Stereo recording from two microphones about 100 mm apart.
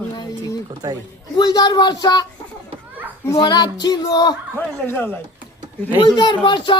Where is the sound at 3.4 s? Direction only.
45° left (ahead or behind).